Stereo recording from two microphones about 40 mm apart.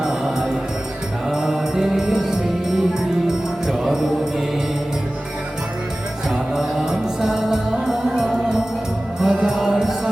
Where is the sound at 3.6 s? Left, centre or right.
Centre.